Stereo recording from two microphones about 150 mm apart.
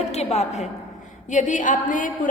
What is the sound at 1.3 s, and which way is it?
A woman's voice, 55° left (ahead or behind).